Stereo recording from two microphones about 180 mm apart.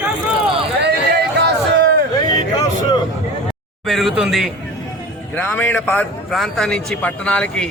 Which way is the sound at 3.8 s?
Centre (ahead or behind).